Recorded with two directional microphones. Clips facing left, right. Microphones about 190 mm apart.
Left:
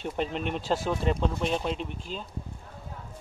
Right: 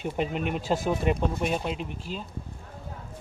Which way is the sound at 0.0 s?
5° right (ahead or behind).